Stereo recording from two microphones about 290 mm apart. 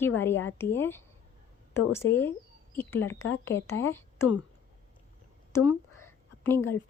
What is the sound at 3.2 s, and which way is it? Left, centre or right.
Speech, left.